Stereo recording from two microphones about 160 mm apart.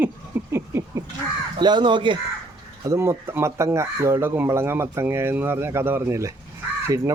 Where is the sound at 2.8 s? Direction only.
15° right (ahead or behind).